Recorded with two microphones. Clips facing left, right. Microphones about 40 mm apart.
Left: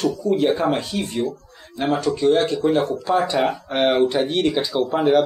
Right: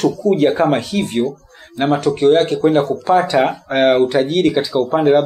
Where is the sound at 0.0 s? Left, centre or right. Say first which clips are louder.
Right 5 dB; right.